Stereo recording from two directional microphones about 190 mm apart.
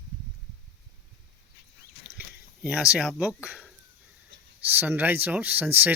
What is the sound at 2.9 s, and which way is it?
Speech, 5° right (ahead or behind).